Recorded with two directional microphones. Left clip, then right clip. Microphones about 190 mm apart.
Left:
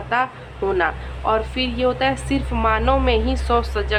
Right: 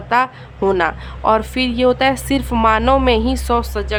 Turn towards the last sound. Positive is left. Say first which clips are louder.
# right 1 dB
turn(degrees=-30)  # may be behind; listen again after turning